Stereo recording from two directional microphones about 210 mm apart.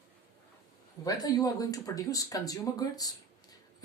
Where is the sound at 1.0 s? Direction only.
20° left (ahead or behind).